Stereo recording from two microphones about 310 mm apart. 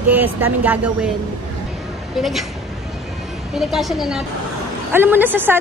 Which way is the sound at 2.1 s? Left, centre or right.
Centre.